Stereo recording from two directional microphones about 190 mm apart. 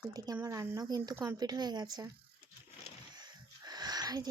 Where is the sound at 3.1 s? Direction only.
20° right (ahead or behind).